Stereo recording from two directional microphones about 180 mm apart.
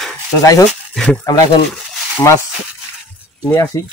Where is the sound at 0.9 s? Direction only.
Centre (ahead or behind).